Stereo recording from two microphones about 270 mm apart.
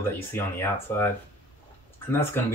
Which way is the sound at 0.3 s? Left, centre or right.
Centre.